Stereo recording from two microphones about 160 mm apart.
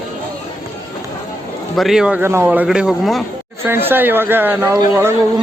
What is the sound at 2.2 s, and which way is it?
A man's voice, 15° right (ahead or behind).